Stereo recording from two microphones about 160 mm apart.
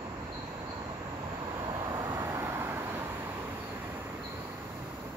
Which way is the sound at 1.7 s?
25° right (ahead or behind).